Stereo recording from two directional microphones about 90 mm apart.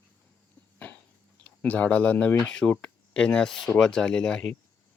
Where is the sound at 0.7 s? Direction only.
15° left (ahead or behind).